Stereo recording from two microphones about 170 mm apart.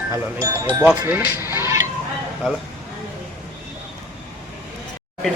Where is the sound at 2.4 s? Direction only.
Centre (ahead or behind).